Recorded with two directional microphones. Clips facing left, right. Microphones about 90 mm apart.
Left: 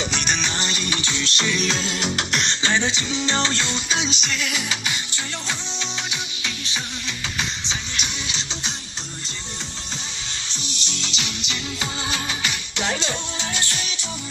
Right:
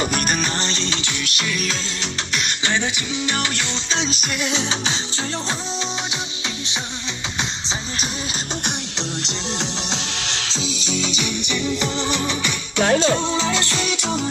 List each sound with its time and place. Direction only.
0.1 s music: 5° right (ahead or behind)
0.7 s music: 10° left (ahead or behind); by 1.7 s 30° left (ahead or behind)
1.7 s music: 10° left (ahead or behind)
2.6 s music: 20° left (ahead or behind)
4.4 s music: 25° right (ahead or behind)
7.6 s music: 35° right (ahead or behind)
8.6 s music: 90° right
12.8 s music: 50° right (ahead or behind)
13.1 s music: 85° right